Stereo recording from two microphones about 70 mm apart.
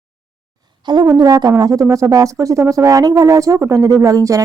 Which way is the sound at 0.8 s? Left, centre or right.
Right.